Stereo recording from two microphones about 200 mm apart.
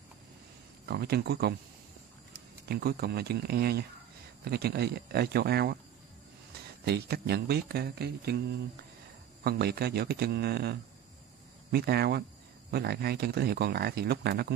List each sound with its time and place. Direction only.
0.8 s speech: 50° right (ahead or behind)
2.7 s speech: 50° right (ahead or behind)
6.8 s speech: 55° right (ahead or behind)
9.4 s speech: 50° right (ahead or behind)